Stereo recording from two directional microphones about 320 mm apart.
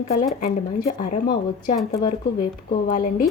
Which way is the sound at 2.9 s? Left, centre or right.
Left.